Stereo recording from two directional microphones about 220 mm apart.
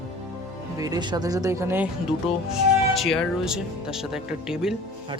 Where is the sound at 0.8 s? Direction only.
15° right (ahead or behind).